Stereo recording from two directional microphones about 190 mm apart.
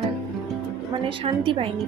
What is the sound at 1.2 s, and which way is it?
Speech, 30° right (ahead or behind).